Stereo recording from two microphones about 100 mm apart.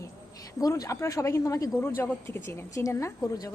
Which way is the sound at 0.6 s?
35° left (ahead or behind).